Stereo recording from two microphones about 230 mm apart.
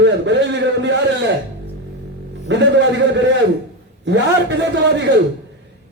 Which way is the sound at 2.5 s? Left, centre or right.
Right.